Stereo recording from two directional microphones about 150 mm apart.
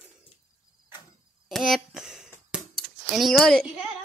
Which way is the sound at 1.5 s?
Centre (ahead or behind).